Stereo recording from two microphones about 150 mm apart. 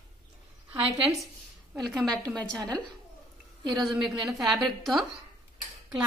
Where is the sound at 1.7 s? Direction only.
Centre (ahead or behind).